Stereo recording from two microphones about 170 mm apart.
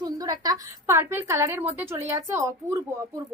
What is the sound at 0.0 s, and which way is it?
A woman's voice, 20° right (ahead or behind).